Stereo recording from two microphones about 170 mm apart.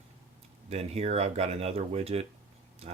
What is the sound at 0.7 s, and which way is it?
Speech, 35° right (ahead or behind).